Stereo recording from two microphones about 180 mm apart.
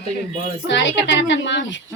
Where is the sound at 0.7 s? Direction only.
90° left.